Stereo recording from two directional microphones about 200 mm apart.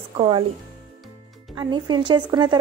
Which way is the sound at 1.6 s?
20° right (ahead or behind).